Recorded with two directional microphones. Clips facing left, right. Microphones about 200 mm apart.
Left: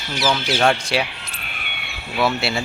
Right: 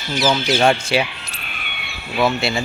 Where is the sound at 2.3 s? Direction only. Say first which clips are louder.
Right 2 dB; 5° left (ahead or behind).